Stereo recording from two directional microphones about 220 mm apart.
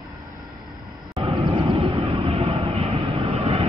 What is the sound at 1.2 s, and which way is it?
Vehicle, 20° right (ahead or behind).